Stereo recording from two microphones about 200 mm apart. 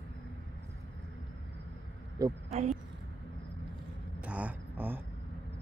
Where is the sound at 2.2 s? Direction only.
20° right (ahead or behind).